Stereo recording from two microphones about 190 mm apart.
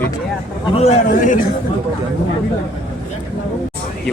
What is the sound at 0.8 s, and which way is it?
Speech, 40° left (ahead or behind).